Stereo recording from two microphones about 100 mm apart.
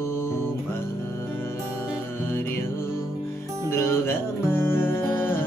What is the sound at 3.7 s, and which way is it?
Music, 25° left (ahead or behind).